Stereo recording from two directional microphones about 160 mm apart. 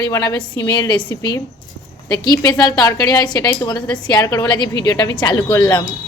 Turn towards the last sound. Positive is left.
turn(degrees=30)  # may be behind; listen again after turning